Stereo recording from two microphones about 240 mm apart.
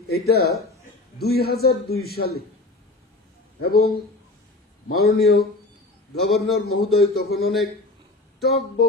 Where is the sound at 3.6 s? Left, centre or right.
Left.